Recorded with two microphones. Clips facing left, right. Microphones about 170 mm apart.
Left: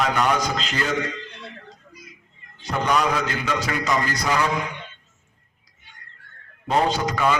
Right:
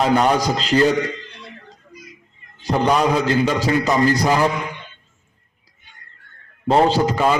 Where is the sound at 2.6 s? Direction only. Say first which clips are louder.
Right 5 dB; 35° right (ahead or behind).